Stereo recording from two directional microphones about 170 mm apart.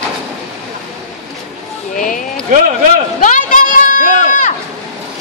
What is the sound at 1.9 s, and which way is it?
Speech, 50° left (ahead or behind).